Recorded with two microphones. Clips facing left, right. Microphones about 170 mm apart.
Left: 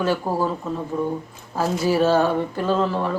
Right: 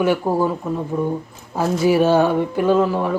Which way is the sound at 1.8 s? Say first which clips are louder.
Right 3 dB; 15° right (ahead or behind).